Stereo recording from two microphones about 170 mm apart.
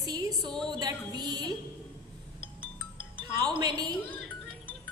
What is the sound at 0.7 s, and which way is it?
Speech, 25° right (ahead or behind).